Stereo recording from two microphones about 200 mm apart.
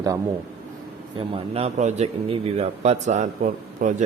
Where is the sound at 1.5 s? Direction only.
35° right (ahead or behind).